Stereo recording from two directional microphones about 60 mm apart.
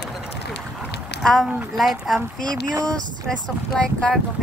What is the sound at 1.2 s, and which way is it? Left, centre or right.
A woman's voice, centre.